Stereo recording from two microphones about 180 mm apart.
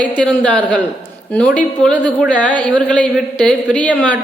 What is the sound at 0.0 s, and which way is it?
Speech, 5° left (ahead or behind).